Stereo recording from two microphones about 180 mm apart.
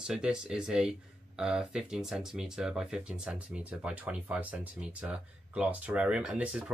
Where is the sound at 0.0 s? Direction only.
5° right (ahead or behind).